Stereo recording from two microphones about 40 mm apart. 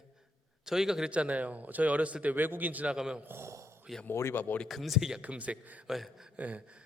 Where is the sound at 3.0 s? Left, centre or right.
Centre.